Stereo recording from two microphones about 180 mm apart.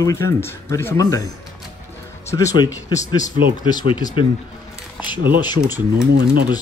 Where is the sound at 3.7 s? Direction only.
25° left (ahead or behind).